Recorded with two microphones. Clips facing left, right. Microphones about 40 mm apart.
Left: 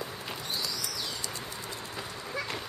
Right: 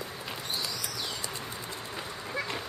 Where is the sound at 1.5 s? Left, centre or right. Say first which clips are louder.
Right 1 dB; centre.